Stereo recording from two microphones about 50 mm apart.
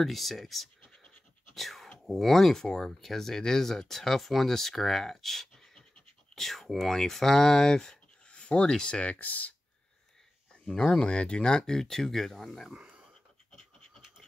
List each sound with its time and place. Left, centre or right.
0.0 s speech: centre
1.5 s a sound: centre
2.0 s speech: centre; by 9.6 s left
10.7 s speech: centre
12.7 s a sound: centre
13.5 s pant: centre